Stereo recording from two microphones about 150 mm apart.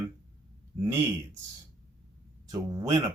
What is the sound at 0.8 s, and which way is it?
Speech, 15° right (ahead or behind).